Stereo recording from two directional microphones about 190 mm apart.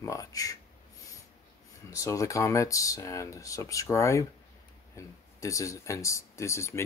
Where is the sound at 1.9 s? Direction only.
15° left (ahead or behind).